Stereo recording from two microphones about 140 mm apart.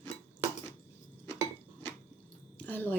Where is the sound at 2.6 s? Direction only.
10° left (ahead or behind).